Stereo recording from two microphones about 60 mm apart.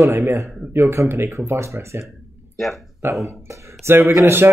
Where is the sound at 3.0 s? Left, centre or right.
Right.